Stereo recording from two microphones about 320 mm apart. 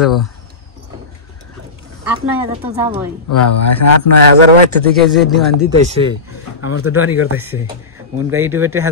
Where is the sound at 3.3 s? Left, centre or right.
Left.